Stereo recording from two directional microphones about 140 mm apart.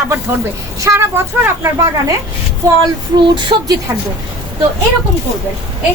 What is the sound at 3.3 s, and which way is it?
Speech, 30° right (ahead or behind).